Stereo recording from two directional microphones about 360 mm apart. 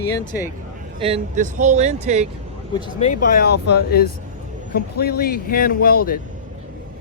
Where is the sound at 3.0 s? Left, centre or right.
Left.